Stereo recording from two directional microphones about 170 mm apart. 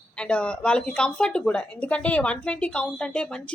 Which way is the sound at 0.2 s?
5° left (ahead or behind).